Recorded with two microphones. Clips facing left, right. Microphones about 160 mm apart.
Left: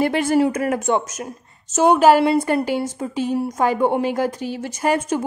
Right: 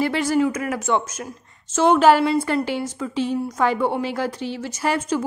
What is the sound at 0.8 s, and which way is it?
Speech, 20° left (ahead or behind).